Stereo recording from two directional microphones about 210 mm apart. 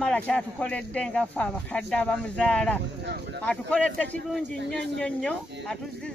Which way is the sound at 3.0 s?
55° right (ahead or behind).